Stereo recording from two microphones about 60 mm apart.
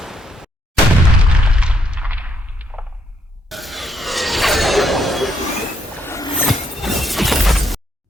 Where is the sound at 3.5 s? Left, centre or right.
Centre.